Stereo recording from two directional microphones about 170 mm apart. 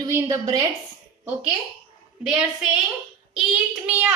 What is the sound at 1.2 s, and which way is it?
A woman's voice, 10° right (ahead or behind).